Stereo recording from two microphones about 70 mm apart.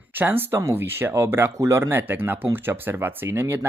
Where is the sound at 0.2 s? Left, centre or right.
Right.